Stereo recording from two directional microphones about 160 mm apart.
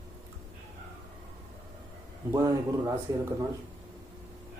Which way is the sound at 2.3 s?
20° right (ahead or behind).